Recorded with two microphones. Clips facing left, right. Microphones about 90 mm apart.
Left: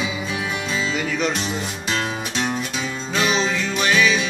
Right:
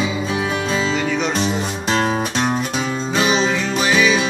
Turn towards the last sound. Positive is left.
turn(degrees=-5)  # may be behind; listen again after turning